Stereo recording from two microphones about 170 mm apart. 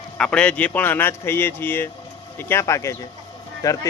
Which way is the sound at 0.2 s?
5° left (ahead or behind).